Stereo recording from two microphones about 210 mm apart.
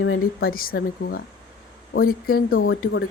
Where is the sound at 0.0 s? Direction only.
60° left (ahead or behind).